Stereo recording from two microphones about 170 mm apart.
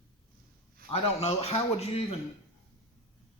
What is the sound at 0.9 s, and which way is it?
Speech, 40° left (ahead or behind).